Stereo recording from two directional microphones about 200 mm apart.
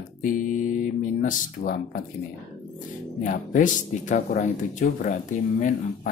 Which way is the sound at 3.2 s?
45° left (ahead or behind).